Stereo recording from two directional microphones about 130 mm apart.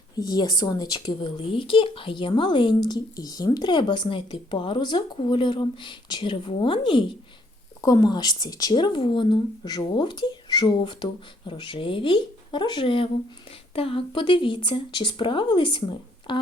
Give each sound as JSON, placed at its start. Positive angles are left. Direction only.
{"t": 0.2, "sound": "speech", "side_deg": 30}
{"t": 7.8, "sound": "speech", "side_deg": 25}